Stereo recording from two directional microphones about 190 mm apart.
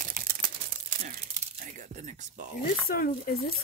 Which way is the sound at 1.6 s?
40° right (ahead or behind).